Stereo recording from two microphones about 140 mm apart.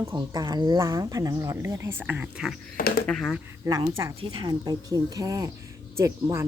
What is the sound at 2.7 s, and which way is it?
Speech, 90° left.